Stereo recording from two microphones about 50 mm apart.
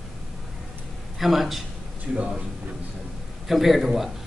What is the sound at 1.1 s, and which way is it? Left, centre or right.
Speech, centre.